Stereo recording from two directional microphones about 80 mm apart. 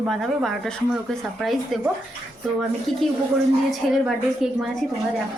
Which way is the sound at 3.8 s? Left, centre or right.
Centre.